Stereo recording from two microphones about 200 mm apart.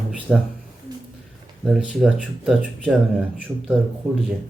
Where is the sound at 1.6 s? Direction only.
5° right (ahead or behind).